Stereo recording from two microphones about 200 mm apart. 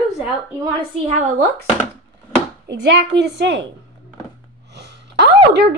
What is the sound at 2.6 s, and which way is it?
A woman's voice, 55° right (ahead or behind).